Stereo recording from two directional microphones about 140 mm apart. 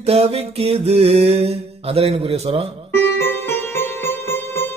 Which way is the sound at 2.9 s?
15° left (ahead or behind).